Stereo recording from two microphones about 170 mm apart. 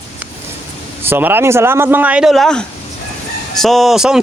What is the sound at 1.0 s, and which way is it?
Speech, 10° right (ahead or behind).